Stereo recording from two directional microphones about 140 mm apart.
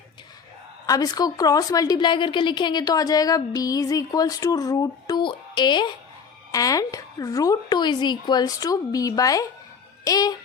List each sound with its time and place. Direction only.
0.9 s a woman's voice: 25° left (ahead or behind)